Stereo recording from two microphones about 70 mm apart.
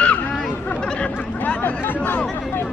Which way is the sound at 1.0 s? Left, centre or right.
Left.